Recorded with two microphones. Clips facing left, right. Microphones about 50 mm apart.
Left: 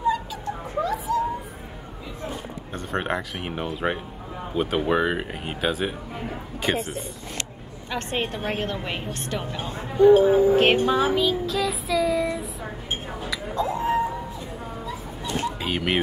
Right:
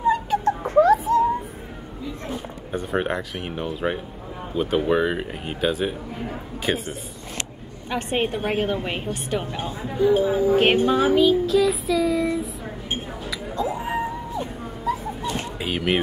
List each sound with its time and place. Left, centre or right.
0.0 s a sound: right
0.5 s a sound: right
2.7 s music: centre
3.5 s speech: centre
4.6 s music: centre
7.9 s a woman's voice: centre
9.7 s speech: left
10.2 s speech: left
10.5 s music: centre
15.6 s speech: centre